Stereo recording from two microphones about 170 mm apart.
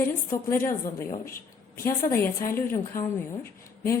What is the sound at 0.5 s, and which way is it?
Speech, 15° left (ahead or behind).